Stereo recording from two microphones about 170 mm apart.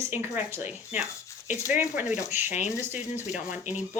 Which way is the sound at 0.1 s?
15° right (ahead or behind).